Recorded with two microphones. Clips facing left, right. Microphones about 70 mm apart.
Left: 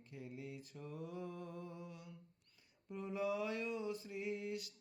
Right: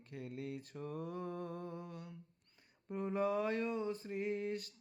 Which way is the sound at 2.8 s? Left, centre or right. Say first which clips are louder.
Right 4 dB; right.